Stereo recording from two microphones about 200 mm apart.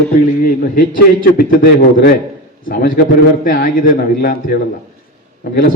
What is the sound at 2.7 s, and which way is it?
A man's voice, 45° left (ahead or behind).